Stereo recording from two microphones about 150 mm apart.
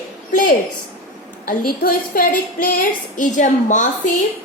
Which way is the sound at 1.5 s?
75° left (ahead or behind).